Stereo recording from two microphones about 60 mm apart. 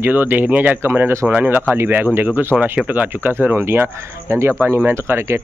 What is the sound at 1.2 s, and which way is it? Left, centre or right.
Speech, right.